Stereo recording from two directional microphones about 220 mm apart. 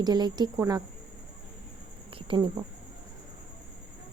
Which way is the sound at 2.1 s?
20° right (ahead or behind).